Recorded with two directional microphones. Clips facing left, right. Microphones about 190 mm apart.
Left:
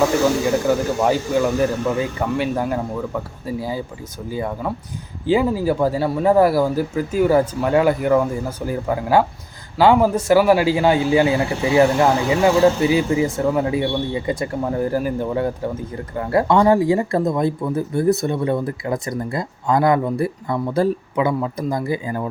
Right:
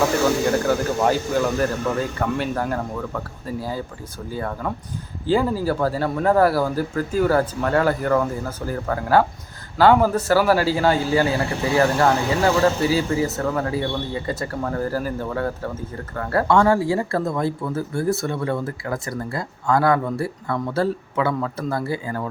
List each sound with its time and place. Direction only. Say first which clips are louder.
1.5 s a man's voice: left 3 dB; 10° left (ahead or behind)